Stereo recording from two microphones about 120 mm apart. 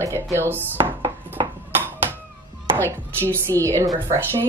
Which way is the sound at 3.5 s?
30° right (ahead or behind).